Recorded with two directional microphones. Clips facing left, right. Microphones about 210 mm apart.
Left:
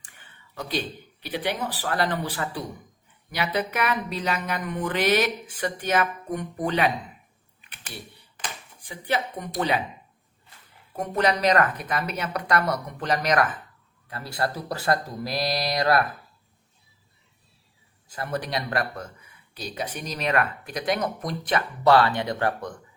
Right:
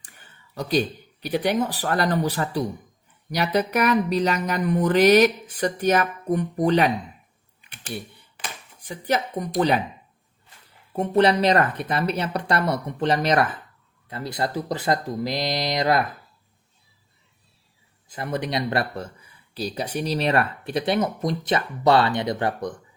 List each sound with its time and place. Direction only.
0.0 s a sound: 40° right (ahead or behind)
1.2 s speech: 45° right (ahead or behind)
3.3 s a sound: 40° right (ahead or behind)
8.9 s speech: 40° right (ahead or behind)
10.9 s speech: 30° right (ahead or behind)
18.1 s speech: 20° right (ahead or behind)